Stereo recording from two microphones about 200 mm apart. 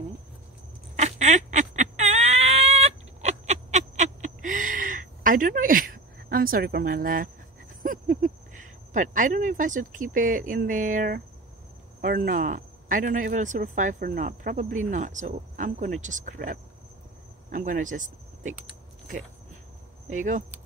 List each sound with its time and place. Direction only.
0.9 s a sound: 35° right (ahead or behind)
7.8 s speech: 40° right (ahead or behind)
20.1 s speech: 40° right (ahead or behind)